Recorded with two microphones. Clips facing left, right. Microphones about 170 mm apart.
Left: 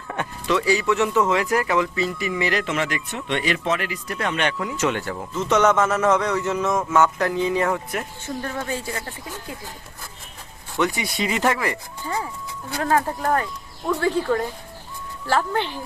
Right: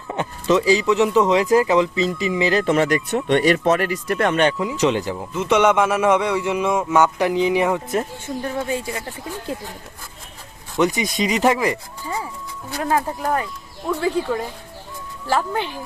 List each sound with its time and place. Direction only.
0.1 s speech: 20° right (ahead or behind); by 4.4 s 50° right (ahead or behind)
4.6 s a man's voice: 20° right (ahead or behind)
10.8 s a man's voice: 20° right (ahead or behind)